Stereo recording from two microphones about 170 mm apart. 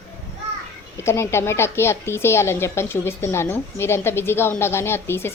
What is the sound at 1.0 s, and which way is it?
A woman's voice, 15° left (ahead or behind).